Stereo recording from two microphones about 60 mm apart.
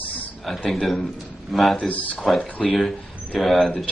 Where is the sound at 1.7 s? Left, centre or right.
Left.